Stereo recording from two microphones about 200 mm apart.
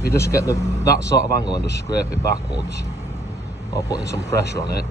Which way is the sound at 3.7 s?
15° left (ahead or behind).